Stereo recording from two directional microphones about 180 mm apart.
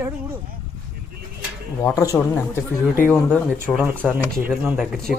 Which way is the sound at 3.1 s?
5° left (ahead or behind).